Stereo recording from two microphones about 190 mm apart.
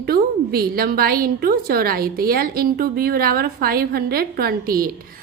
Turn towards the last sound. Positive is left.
turn(degrees=-50)  # may be behind; listen again after turning